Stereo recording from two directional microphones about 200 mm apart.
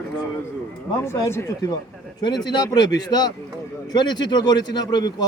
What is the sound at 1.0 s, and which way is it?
A man's voice, 15° left (ahead or behind).